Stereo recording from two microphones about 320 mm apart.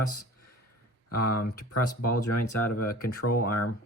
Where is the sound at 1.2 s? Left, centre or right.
Left.